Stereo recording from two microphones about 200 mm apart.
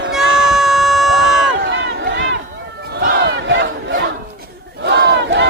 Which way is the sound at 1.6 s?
60° right (ahead or behind).